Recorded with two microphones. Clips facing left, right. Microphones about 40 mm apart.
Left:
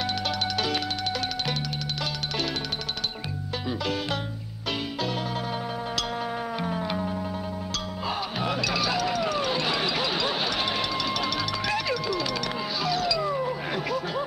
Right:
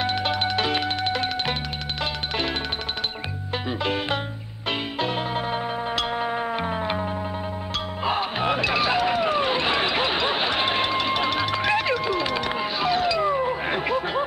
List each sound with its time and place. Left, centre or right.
0.0 s music: right
3.8 s music: right